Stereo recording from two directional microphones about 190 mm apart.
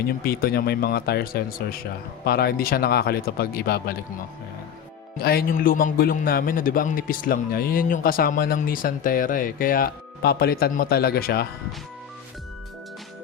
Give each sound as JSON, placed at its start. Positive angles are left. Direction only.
{"t": 0.3, "sound": "a man's voice", "side_deg": 55}
{"t": 5.2, "sound": "a man's voice", "side_deg": 50}